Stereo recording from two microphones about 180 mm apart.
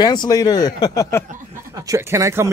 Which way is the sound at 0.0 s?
20° left (ahead or behind).